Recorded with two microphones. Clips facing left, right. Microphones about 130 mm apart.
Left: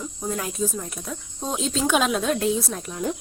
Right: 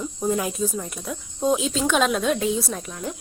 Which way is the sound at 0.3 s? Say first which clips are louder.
Right 3 dB; 10° right (ahead or behind).